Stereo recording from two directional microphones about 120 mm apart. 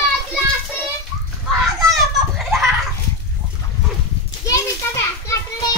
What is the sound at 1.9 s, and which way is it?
Children playing, centre (ahead or behind).